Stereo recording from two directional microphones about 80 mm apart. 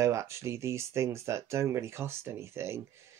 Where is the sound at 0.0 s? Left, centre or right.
Right.